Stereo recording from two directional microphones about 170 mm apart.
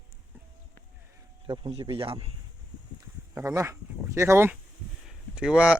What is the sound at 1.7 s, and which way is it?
Speech, 30° right (ahead or behind).